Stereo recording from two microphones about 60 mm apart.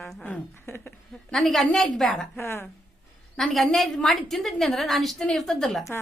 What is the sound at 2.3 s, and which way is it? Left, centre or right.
Speech, left.